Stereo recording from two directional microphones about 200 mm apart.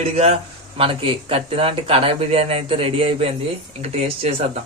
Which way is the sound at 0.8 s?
25° right (ahead or behind).